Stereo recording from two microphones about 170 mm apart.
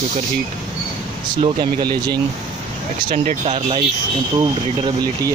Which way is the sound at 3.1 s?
40° right (ahead or behind).